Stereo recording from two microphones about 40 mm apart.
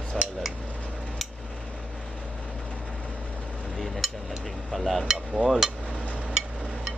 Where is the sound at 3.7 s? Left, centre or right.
Centre.